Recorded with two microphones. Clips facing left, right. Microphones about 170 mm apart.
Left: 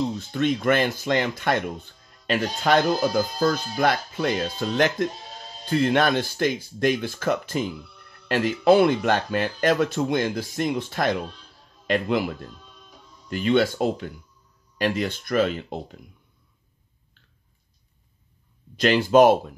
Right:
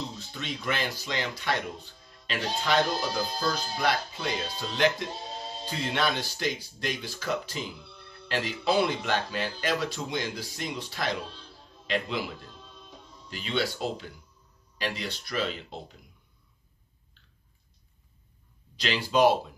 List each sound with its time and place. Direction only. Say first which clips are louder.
0.3 s speech: left 12 dB; 55° left (ahead or behind)
5.3 s sheep: right 4 dB; 30° right (ahead or behind)
5.7 s speech: left 9 dB; 55° left (ahead or behind)
18.8 s speech: left 8 dB; 50° left (ahead or behind)